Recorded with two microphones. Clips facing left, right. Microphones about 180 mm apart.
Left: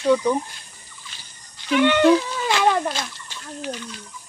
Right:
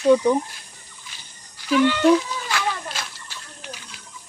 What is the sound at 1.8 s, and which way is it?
Speech, 70° left (ahead or behind).